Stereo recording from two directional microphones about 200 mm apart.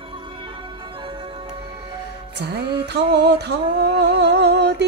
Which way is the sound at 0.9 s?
25° right (ahead or behind).